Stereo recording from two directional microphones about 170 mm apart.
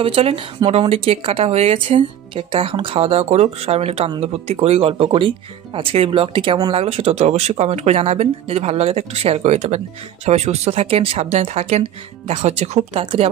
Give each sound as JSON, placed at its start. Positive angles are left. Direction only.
{"t": 0.0, "sound": "speech", "side_deg": -35}